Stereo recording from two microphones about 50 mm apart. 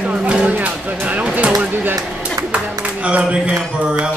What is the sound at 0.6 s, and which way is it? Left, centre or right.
Music, right.